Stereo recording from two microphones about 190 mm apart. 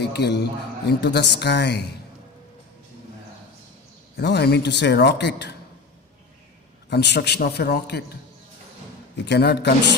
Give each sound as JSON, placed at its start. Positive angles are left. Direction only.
{"t": 0.0, "sound": "a man's voice", "side_deg": 60}
{"t": 4.2, "sound": "a man's voice", "side_deg": 60}
{"t": 6.9, "sound": "a man's voice", "side_deg": 60}
{"t": 9.2, "sound": "a man's voice", "side_deg": 60}